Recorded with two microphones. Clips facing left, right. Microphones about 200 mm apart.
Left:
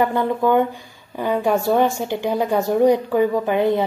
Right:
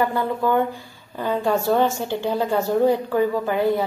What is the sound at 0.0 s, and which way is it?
A woman's voice, 20° left (ahead or behind).